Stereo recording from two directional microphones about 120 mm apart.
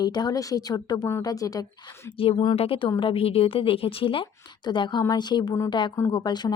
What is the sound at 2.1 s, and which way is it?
A woman's voice, 50° left (ahead or behind).